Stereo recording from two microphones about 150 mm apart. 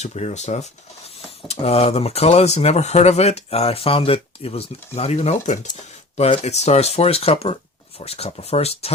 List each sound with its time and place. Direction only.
0.0 s speech: 50° left (ahead or behind)